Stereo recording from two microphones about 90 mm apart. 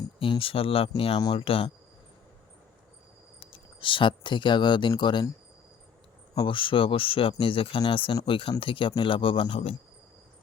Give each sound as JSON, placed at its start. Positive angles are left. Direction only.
{"t": 0.2, "sound": "speech", "side_deg": 90}
{"t": 3.4, "sound": "speech", "side_deg": 85}
{"t": 6.3, "sound": "speech", "side_deg": 65}